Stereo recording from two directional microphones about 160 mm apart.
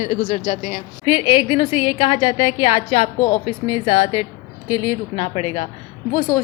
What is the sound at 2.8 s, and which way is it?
A woman's voice, 35° left (ahead or behind).